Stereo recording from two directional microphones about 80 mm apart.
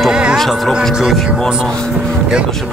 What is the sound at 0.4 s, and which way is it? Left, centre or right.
Speech, centre.